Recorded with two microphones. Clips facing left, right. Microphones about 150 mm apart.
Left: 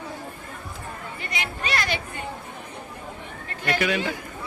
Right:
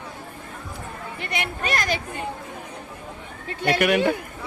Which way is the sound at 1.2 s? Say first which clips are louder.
Right 4 dB; 60° right (ahead or behind).